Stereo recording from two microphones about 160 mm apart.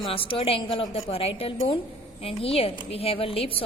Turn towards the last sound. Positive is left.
turn(degrees=35)  # may be behind; listen again after turning